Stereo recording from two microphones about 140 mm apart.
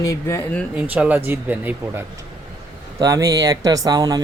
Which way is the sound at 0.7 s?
10° right (ahead or behind).